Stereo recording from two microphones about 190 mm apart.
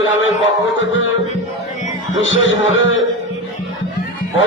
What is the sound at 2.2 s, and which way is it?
Speech, 90° left.